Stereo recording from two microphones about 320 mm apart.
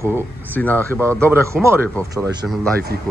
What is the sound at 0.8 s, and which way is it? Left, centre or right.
Speech, centre.